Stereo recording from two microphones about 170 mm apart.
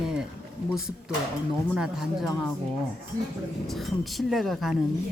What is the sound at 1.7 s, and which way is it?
Speech, 5° right (ahead or behind).